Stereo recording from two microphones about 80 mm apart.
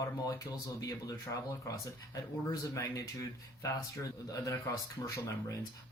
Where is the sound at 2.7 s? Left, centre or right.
Left.